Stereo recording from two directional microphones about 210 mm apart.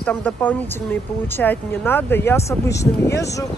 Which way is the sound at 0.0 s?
5° left (ahead or behind).